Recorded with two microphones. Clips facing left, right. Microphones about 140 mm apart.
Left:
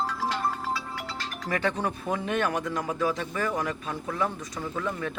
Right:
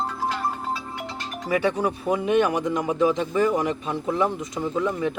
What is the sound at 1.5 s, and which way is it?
Speech, 10° right (ahead or behind).